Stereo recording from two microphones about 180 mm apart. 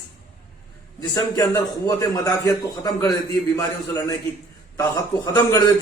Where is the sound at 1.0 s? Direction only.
20° left (ahead or behind).